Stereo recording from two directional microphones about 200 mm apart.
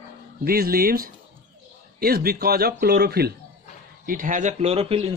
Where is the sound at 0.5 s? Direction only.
50° right (ahead or behind).